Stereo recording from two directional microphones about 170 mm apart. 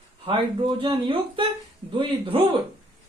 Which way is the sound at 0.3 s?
30° right (ahead or behind).